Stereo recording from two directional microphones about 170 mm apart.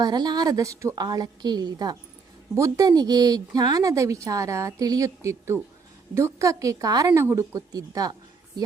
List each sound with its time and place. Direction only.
0.0 s a woman's voice: 25° right (ahead or behind)